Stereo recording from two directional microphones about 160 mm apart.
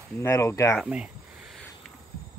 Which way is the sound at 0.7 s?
5° right (ahead or behind).